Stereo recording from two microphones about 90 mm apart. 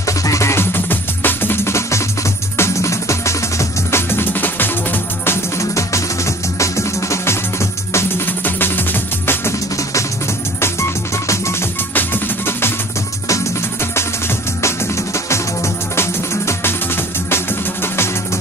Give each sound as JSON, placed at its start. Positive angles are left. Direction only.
{"t": 0.0, "sound": "music", "side_deg": 35}
{"t": 10.6, "sound": "music", "side_deg": 30}
{"t": 11.9, "sound": "music", "side_deg": 20}
{"t": 15.1, "sound": "music", "side_deg": 35}